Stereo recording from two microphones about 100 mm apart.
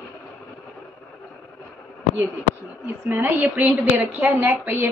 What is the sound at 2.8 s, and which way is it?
A woman's voice, 20° right (ahead or behind).